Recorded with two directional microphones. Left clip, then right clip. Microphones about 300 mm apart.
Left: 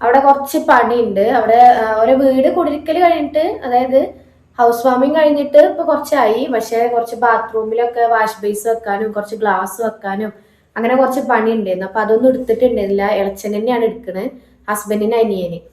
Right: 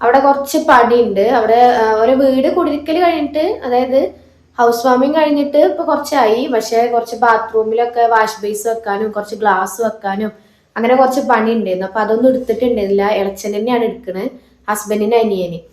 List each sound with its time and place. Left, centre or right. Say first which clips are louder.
0.0 s a woman's voice: even; centre